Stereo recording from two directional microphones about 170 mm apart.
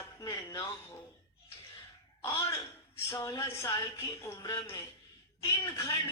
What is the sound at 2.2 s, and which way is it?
A woman's voice, 15° left (ahead or behind).